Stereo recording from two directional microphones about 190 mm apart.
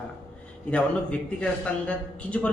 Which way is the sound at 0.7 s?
5° left (ahead or behind).